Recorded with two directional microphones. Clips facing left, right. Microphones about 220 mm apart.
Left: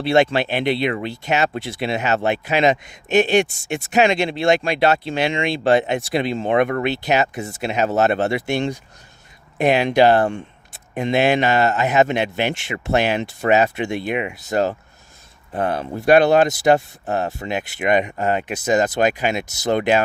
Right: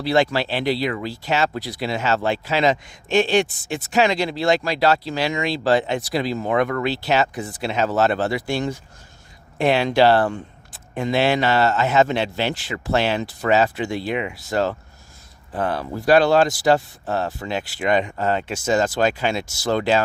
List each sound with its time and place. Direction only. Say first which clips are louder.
0.0 s speech: left 3 dB; 25° left (ahead or behind)